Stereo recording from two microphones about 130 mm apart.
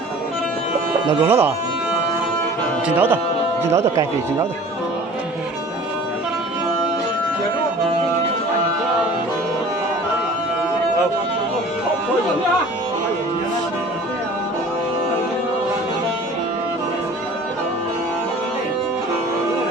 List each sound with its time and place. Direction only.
1.2 s speech: 15° right (ahead or behind)
2.8 s speech: 15° right (ahead or behind)